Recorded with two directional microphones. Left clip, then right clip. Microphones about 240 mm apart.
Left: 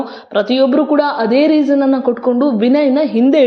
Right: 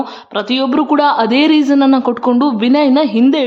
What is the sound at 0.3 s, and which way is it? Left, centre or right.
A woman's voice, centre.